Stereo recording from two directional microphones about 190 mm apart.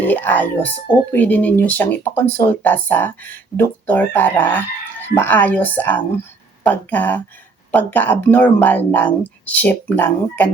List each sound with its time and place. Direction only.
0.0 s speech: 10° left (ahead or behind)